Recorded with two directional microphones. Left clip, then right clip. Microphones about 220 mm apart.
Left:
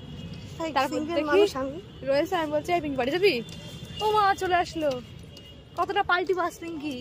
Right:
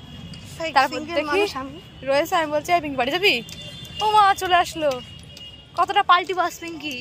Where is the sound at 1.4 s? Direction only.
50° left (ahead or behind).